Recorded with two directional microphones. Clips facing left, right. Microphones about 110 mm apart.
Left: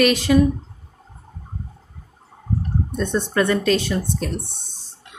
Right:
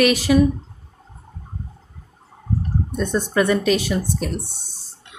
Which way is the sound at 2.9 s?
10° right (ahead or behind).